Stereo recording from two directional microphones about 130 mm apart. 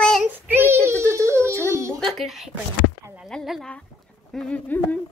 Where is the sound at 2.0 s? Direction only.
Centre (ahead or behind).